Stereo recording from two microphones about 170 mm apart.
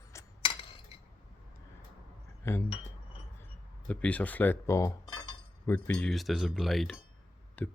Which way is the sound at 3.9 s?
10° left (ahead or behind).